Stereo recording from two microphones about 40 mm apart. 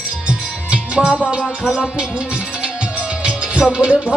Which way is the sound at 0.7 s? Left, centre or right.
Right.